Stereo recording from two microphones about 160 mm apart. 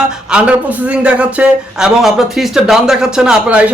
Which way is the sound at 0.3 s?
5° right (ahead or behind).